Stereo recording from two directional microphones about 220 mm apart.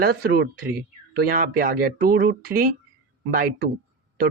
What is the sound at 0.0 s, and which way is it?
Speech, 45° right (ahead or behind).